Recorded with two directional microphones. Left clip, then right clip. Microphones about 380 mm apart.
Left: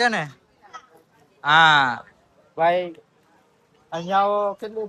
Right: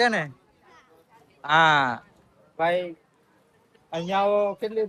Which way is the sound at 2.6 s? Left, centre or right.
Centre.